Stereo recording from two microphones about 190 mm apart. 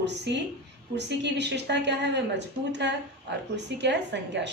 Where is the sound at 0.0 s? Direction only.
65° right (ahead or behind).